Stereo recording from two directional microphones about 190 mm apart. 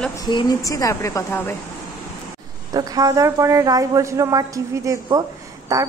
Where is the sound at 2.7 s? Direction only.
20° right (ahead or behind).